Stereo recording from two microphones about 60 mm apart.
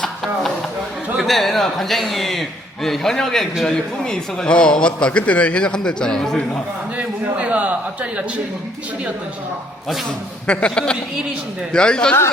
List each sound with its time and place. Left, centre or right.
1.2 s a man's voice: centre
7.3 s a sound: right
10.4 s a man's voice: centre